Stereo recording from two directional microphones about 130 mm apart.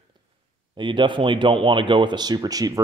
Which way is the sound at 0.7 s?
40° right (ahead or behind).